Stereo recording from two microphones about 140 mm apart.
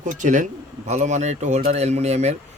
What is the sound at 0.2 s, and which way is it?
Speech, 65° right (ahead or behind).